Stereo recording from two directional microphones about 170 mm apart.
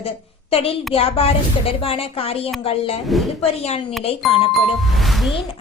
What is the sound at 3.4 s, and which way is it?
Speech, 35° left (ahead or behind).